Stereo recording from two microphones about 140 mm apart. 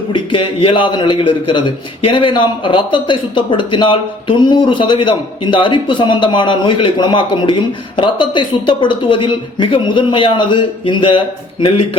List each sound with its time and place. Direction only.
0.1 s a man's voice: 35° left (ahead or behind)